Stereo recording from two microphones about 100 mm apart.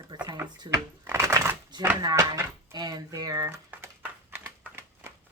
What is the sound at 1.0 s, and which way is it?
Typing, 25° right (ahead or behind).